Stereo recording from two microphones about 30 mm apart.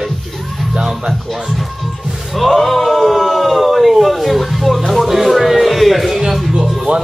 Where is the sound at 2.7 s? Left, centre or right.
Centre.